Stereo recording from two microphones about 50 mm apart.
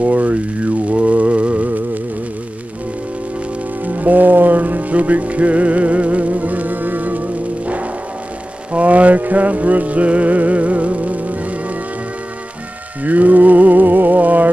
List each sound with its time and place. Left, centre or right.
0.0 s a sound: right
3.8 s music: right
13.0 s music: right